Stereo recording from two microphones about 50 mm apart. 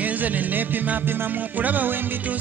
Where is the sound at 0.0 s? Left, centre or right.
Right.